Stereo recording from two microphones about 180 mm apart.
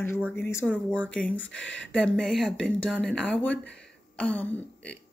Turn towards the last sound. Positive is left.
turn(degrees=5)  # may be behind; listen again after turning